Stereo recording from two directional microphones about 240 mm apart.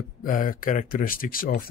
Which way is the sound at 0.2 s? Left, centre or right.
Left.